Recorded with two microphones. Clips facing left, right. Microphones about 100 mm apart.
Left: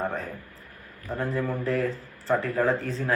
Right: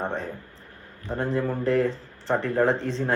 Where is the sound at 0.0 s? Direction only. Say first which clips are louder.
Right 1 dB; 30° right (ahead or behind).